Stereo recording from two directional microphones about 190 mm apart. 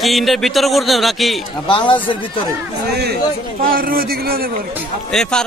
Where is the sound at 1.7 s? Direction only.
25° left (ahead or behind).